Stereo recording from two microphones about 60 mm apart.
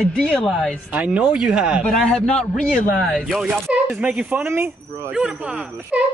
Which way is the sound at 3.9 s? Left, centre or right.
Centre.